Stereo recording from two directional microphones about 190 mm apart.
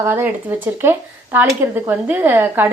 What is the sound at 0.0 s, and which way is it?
Speech, 10° right (ahead or behind).